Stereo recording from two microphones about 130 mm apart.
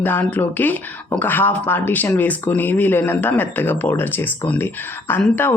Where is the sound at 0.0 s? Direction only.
15° left (ahead or behind).